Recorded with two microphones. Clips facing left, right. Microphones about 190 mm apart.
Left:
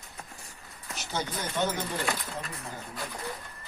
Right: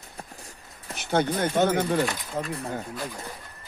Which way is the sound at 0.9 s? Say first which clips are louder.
Right 10 dB; 60° right (ahead or behind).